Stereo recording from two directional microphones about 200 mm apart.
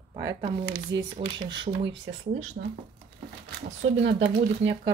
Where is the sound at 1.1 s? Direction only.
25° right (ahead or behind).